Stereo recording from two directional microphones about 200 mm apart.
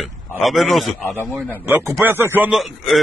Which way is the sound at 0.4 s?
Centre (ahead or behind).